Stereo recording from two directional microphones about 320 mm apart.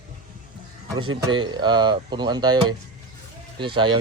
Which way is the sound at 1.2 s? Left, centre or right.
Centre.